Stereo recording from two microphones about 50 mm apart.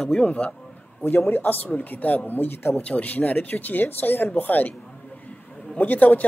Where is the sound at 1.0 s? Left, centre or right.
Left.